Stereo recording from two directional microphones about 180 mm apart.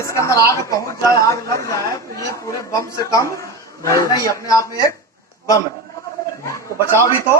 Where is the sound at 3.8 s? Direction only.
15° left (ahead or behind).